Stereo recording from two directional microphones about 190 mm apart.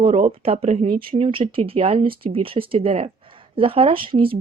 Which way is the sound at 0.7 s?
45° right (ahead or behind).